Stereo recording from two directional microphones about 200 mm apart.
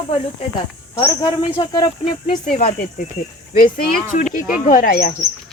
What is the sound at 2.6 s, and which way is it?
Speech, 40° left (ahead or behind).